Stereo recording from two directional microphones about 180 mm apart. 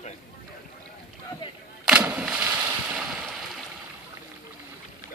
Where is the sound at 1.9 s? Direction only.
5° right (ahead or behind).